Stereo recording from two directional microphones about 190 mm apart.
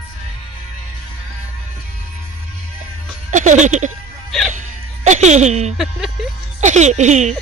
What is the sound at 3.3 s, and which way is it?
Speech, 40° right (ahead or behind).